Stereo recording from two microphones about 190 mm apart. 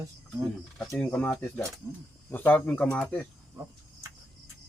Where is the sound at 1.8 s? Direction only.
15° right (ahead or behind).